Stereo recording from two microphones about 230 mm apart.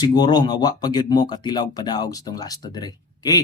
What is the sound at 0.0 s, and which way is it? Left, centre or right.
Speech, centre.